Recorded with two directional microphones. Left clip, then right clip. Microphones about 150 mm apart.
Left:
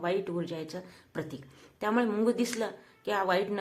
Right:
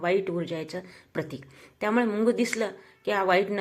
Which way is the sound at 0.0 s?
15° right (ahead or behind).